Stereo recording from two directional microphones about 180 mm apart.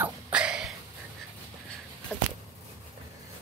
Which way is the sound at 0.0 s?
5° right (ahead or behind).